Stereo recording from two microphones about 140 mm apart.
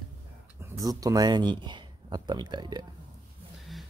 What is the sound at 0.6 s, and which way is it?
Speech, 25° right (ahead or behind).